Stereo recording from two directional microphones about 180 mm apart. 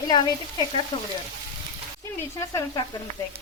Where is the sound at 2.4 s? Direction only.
15° left (ahead or behind).